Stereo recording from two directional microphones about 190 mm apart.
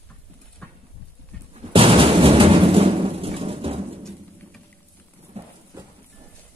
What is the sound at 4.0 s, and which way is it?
Bird, 5° left (ahead or behind).